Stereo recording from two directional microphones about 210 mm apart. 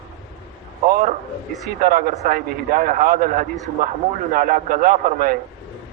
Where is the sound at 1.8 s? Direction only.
40° right (ahead or behind).